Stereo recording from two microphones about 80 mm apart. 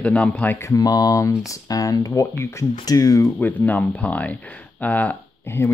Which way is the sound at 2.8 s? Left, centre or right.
Left.